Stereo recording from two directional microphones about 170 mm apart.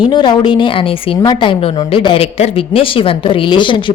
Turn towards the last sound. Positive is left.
turn(degrees=30)  # may be behind; listen again after turning